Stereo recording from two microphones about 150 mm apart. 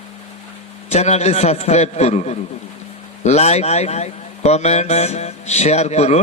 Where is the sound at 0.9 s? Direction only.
45° left (ahead or behind).